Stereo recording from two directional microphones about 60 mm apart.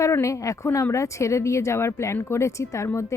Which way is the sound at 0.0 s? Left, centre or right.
Left.